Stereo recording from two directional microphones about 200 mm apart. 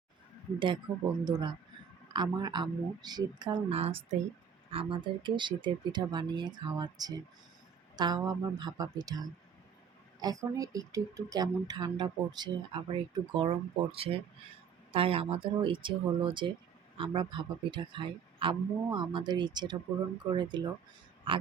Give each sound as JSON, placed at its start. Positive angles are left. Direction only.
{"t": 0.9, "sound": "speech", "side_deg": -20}